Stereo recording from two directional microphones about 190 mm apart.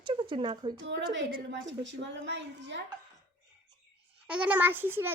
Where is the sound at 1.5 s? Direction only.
70° right (ahead or behind).